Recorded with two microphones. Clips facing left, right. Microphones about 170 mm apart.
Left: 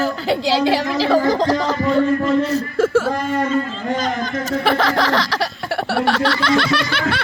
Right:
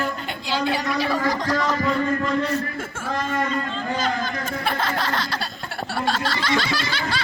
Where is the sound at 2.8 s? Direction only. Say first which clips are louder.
Left 15 dB; 80° left.